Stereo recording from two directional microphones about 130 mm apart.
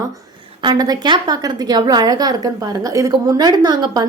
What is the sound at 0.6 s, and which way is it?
A woman's voice, 30° right (ahead or behind).